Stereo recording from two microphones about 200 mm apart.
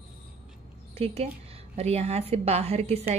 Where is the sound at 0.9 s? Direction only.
30° right (ahead or behind).